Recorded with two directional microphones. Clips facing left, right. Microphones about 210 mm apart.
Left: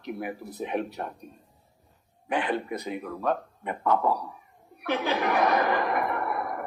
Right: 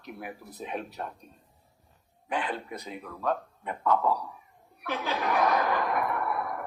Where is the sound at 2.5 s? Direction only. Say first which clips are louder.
Left 7 dB; 10° left (ahead or behind).